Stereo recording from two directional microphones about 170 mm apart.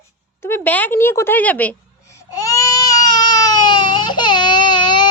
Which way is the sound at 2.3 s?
20° left (ahead or behind).